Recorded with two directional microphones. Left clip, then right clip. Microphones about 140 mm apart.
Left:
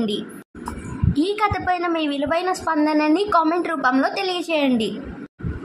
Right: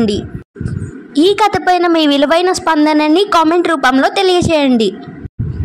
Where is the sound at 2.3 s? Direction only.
45° right (ahead or behind).